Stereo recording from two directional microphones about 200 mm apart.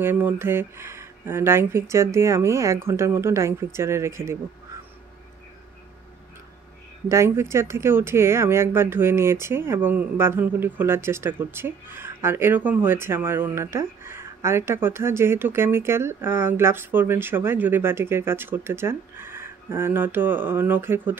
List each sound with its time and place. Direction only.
0.0 s speech: 10° right (ahead or behind)
7.1 s speech: 15° right (ahead or behind)